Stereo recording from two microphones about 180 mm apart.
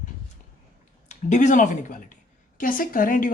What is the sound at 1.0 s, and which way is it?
Speech, 45° left (ahead or behind).